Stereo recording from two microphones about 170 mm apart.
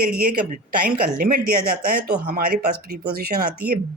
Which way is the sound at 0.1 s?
60° right (ahead or behind).